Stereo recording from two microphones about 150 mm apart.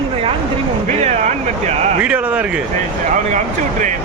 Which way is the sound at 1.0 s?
45° right (ahead or behind).